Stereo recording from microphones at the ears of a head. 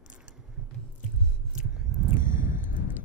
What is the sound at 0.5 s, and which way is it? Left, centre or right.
Biting, right.